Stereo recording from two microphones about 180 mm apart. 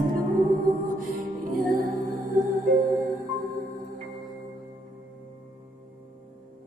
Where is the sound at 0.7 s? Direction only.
50° right (ahead or behind).